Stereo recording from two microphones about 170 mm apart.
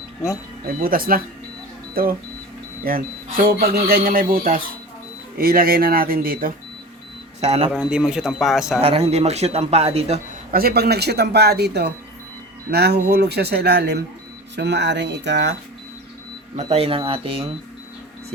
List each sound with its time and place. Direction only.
0.8 s speech: 55° right (ahead or behind)
7.4 s a man's voice: 40° right (ahead or behind)
7.7 s a man's voice: 5° right (ahead or behind)
8.8 s a man's voice: 35° right (ahead or behind)
10.5 s a man's voice: 60° right (ahead or behind)
14.5 s speech: 90° right
16.6 s a man's voice: 35° right (ahead or behind)